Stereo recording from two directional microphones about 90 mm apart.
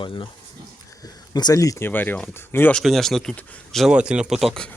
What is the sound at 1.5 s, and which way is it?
Speech, 35° left (ahead or behind).